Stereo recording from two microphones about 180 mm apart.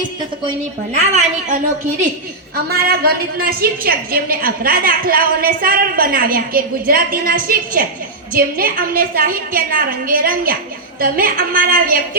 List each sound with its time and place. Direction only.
0.9 s a woman's voice: 40° right (ahead or behind)
2.6 s a woman's voice: 55° right (ahead or behind)